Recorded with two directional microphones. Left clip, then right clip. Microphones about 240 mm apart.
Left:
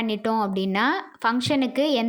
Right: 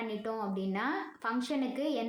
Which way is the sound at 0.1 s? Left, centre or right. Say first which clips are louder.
Left 12 dB; left.